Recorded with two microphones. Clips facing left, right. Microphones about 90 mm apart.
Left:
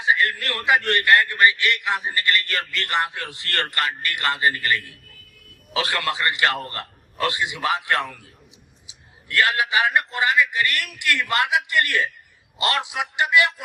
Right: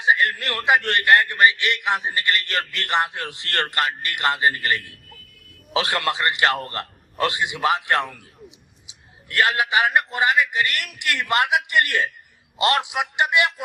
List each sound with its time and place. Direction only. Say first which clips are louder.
0.0 s a man's voice: right 1 dB; 20° right (ahead or behind)